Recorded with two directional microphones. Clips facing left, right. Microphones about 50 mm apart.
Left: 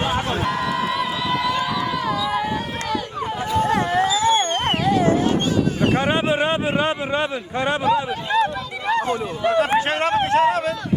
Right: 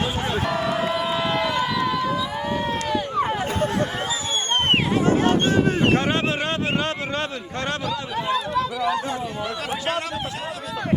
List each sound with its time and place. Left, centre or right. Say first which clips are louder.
1.3 s vehicle: left 1 dB; right
3.9 s a sound: left 8 dB; left
5.9 s speech: left 2 dB; centre
7.9 s speech: left 5 dB; left
9.4 s speech: left 9 dB; left